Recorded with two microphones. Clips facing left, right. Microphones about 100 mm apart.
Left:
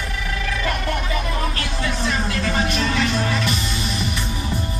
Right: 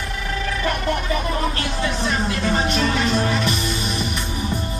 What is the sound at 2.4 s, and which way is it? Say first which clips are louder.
Music: right 2 dB; 25° right (ahead or behind).